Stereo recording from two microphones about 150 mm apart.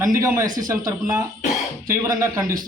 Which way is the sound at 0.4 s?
65° right (ahead or behind).